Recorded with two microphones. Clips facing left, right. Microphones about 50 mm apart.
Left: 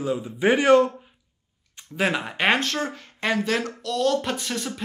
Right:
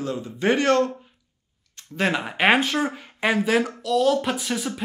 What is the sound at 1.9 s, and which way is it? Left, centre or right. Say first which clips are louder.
Speech: right 1 dB; centre.